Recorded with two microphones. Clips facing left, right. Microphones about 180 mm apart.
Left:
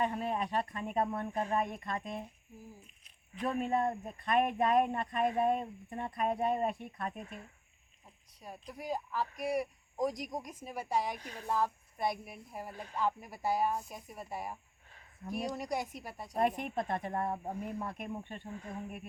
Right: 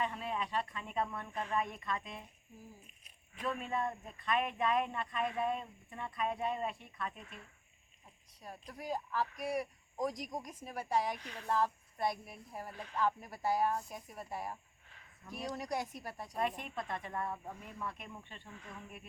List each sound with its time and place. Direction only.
0.0 s speech: 45° left (ahead or behind)
3.4 s speech: 45° left (ahead or behind)
8.4 s speech: 10° left (ahead or behind)
11.2 s speech: 40° left (ahead or behind)
11.4 s speech: 10° left (ahead or behind)
14.8 s a sound: 40° left (ahead or behind)
15.7 s speech: 10° left (ahead or behind)
16.3 s speech: 45° left (ahead or behind)